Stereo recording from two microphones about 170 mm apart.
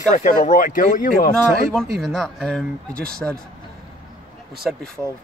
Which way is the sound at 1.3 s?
5° left (ahead or behind).